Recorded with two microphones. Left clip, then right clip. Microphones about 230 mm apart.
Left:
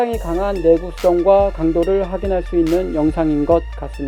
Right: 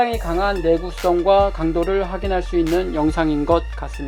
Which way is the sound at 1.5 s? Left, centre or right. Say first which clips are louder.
Left 3 dB; left.